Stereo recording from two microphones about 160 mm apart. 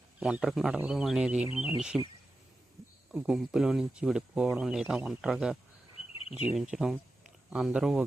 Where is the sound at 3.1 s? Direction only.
5° right (ahead or behind).